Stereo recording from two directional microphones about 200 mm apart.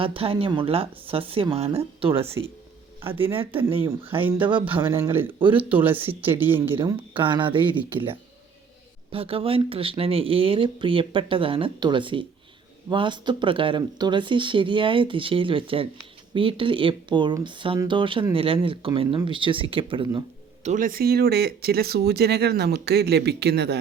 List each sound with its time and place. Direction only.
0.0 s speech: 25° right (ahead or behind)
3.0 s speech: 10° right (ahead or behind)
5.4 s speech: 25° right (ahead or behind)
5.6 s speech: 10° right (ahead or behind)
7.1 s speech: 25° right (ahead or behind)
20.7 s speech: 40° right (ahead or behind)